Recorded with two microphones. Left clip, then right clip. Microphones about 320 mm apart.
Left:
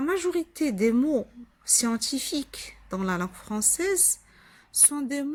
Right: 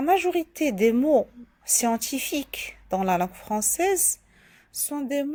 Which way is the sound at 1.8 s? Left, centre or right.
Centre.